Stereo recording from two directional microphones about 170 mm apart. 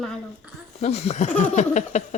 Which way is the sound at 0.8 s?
40° left (ahead or behind).